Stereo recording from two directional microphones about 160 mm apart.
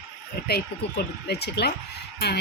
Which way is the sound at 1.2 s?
90° left.